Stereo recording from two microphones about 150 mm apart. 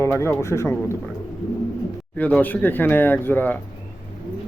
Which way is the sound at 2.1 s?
10° left (ahead or behind).